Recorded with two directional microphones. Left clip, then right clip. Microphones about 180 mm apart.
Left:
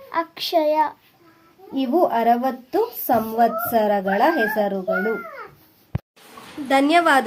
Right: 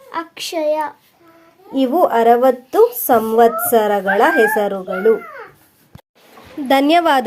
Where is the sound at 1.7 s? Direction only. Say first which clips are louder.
Right 5 dB; 25° right (ahead or behind).